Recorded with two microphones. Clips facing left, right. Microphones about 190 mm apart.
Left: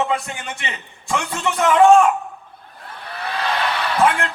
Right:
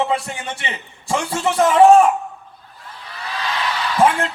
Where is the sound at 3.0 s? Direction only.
60° left (ahead or behind).